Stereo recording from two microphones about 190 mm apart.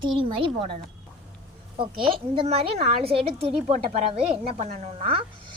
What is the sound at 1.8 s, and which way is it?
Speech, 30° right (ahead or behind).